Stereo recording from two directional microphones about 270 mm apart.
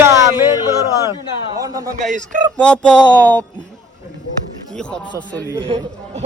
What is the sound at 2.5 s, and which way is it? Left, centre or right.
Speech, centre.